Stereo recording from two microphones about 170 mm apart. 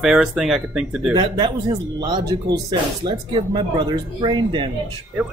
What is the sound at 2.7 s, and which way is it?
Speech, 25° right (ahead or behind).